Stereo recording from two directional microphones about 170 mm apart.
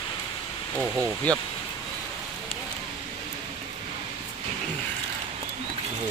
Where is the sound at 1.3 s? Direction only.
10° left (ahead or behind).